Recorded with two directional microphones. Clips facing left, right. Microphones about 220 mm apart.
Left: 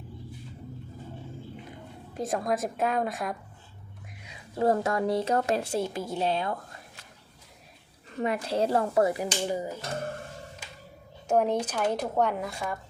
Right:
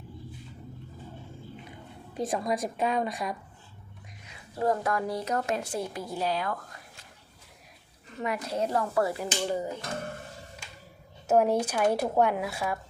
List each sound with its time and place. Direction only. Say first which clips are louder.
2.1 s a woman's voice: left 1 dB; centre (ahead or behind)
4.6 s speech: left 3 dB; 25° left (ahead or behind)
8.2 s speech: left 3 dB; 30° left (ahead or behind); by 9.8 s 10° left (ahead or behind)
11.3 s speech: right 2 dB; 5° right (ahead or behind)